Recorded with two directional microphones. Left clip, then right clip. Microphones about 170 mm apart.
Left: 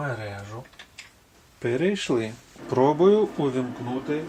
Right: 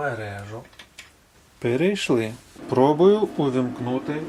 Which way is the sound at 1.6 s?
35° right (ahead or behind).